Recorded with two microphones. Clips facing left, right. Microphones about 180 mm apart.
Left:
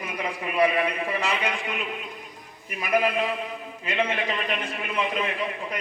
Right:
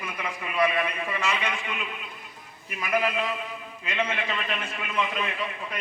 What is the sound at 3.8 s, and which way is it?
A man's voice, 15° left (ahead or behind).